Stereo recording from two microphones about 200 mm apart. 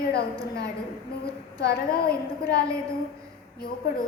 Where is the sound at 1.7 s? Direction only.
50° left (ahead or behind).